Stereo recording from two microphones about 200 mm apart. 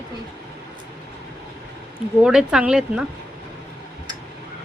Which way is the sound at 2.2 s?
5° right (ahead or behind).